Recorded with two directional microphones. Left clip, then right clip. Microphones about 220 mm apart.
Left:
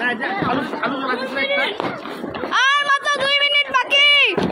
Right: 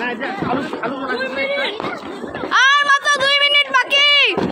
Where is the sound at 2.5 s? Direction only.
5° right (ahead or behind).